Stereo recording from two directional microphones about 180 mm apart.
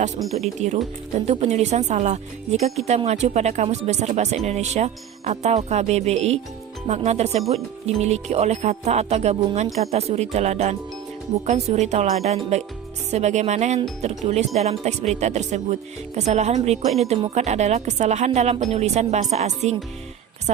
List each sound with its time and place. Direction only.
0.2 s speech: centre (ahead or behind)
1.2 s speech: 35° right (ahead or behind)